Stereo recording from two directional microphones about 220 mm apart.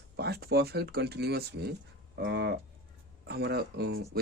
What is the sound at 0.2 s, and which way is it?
Speech, 45° right (ahead or behind).